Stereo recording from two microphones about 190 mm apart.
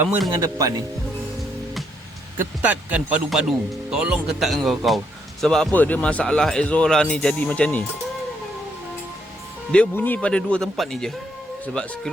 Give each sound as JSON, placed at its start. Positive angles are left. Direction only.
{"t": 0.0, "sound": "speech", "side_deg": -10}
{"t": 2.6, "sound": "speech", "side_deg": -10}
{"t": 9.7, "sound": "speech", "side_deg": 5}